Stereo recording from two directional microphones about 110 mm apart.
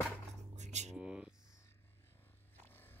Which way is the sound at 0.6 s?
90° right.